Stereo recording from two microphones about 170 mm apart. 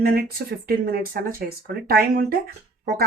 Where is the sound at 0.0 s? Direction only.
60° right (ahead or behind).